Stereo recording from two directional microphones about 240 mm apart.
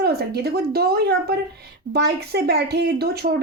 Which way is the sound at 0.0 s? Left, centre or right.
Right.